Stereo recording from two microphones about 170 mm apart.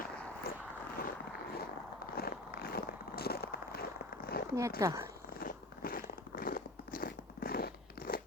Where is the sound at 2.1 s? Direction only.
65° left (ahead or behind).